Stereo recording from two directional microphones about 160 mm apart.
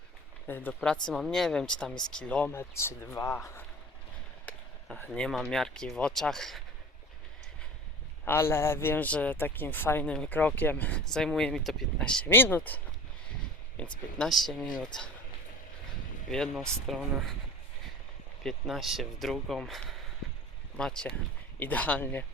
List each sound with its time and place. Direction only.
0.4 s a man's voice: 10° left (ahead or behind)
8.2 s a man's voice: 15° left (ahead or behind)
16.3 s speech: 5° left (ahead or behind)
18.4 s a man's voice: centre (ahead or behind)